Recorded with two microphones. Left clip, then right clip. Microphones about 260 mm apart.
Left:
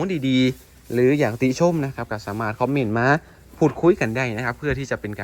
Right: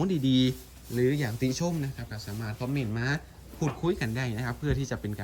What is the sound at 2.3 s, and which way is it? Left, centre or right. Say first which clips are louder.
Speech: left 14 dB; right.